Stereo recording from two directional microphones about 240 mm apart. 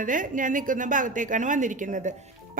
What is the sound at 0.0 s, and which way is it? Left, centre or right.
A woman's voice, right.